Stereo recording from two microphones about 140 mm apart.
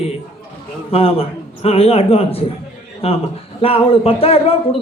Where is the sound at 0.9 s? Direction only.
45° left (ahead or behind).